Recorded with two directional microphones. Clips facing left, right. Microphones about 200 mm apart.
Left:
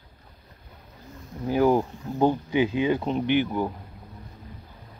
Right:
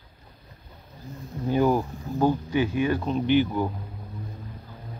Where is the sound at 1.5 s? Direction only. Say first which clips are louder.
Left 1 dB; 15° left (ahead or behind).